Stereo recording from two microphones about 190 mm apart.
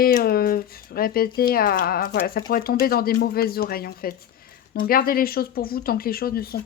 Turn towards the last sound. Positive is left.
turn(degrees=55)  # may be behind; listen again after turning